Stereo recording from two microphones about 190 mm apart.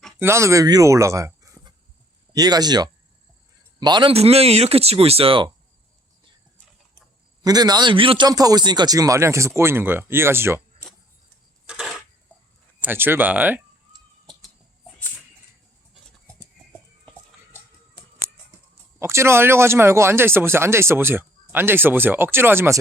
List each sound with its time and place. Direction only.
0.2 s a man's voice: 15° right (ahead or behind)
7.4 s a man's voice: 20° right (ahead or behind)
11.6 s a sound: 5° right (ahead or behind)
12.8 s speech: 10° right (ahead or behind)
18.9 s speech: 15° right (ahead or behind)